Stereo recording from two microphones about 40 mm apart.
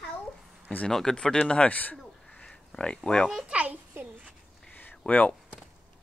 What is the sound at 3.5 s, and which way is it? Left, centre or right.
Speech, right.